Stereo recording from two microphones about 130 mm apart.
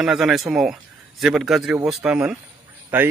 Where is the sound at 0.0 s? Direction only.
Centre (ahead or behind).